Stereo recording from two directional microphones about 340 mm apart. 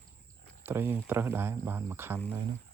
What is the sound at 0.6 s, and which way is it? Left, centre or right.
Speech, centre.